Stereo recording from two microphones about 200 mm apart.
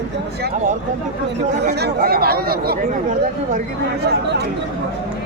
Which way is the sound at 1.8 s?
50° right (ahead or behind).